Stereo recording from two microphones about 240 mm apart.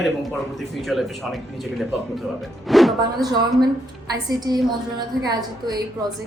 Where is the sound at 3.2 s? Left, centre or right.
Centre.